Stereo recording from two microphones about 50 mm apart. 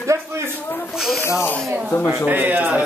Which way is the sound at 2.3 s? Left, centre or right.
Right.